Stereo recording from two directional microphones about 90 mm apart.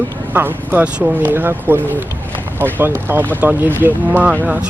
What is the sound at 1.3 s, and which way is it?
Speech, 25° right (ahead or behind).